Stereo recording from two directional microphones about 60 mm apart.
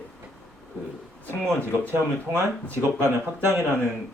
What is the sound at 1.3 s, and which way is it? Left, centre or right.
Speech, right.